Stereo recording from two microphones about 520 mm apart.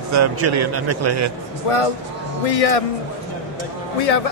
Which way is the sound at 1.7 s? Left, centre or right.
Left.